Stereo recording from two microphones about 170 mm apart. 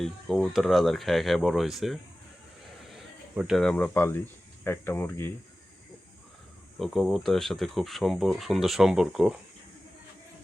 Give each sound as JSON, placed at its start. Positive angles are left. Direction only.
{"t": 0.0, "sound": "speech", "side_deg": 0}
{"t": 6.7, "sound": "speech", "side_deg": 0}